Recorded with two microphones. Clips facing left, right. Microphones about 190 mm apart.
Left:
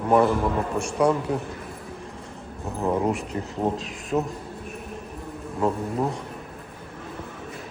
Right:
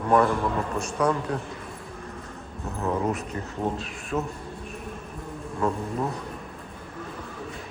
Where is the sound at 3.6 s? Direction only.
35° left (ahead or behind).